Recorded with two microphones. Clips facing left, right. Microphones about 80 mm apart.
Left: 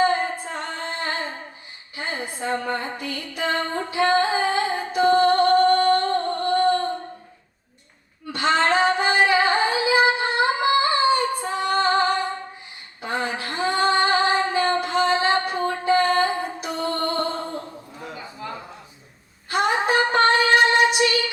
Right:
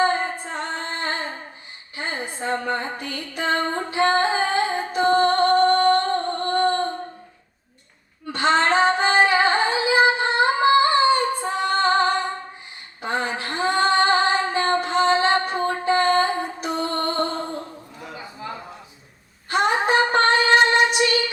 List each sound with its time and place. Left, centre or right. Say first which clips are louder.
0.0 s singing: even; right
2.0 s music: even; right
8.3 s female singing: right 1 dB; right
19.5 s a sound: right 1 dB; right
19.8 s music: even; right